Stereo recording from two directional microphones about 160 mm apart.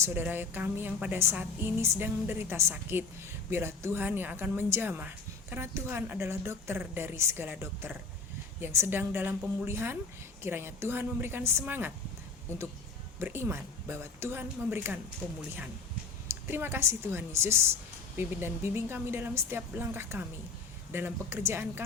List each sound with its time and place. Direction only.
0.0 s a woman's voice: 10° right (ahead or behind)
13.1 s a woman's voice: 15° right (ahead or behind)
16.3 s a woman's voice: 15° right (ahead or behind)